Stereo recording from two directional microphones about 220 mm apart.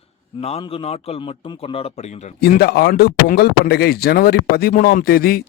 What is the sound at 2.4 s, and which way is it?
Speech, 45° left (ahead or behind).